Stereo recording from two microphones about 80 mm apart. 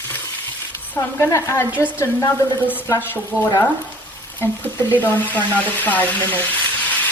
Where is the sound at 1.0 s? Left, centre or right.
Left.